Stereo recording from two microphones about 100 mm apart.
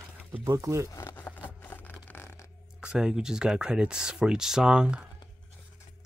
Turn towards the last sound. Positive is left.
turn(degrees=-10)  # may be behind; listen again after turning